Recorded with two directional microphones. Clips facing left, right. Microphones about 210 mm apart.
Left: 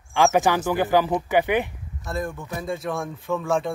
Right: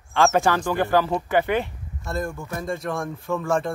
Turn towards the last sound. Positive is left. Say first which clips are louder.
# even
turn(degrees=0)  # may be behind; listen again after turning